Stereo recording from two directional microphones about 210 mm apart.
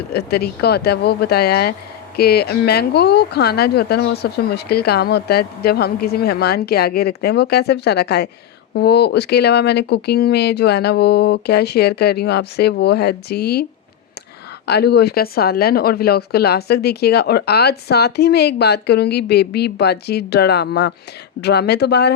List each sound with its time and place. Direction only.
0.1 s speech: 50° left (ahead or behind)
14.7 s speech: 50° left (ahead or behind)